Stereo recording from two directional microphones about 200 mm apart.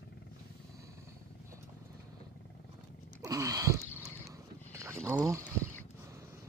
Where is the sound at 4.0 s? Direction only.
15° right (ahead or behind).